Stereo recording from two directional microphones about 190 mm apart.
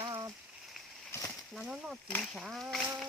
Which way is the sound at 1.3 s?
Centre (ahead or behind).